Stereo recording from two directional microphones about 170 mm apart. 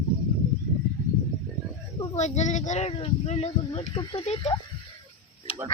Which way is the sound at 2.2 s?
45° left (ahead or behind).